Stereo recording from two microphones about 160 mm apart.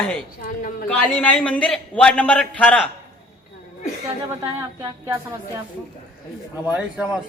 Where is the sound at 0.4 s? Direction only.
60° left (ahead or behind).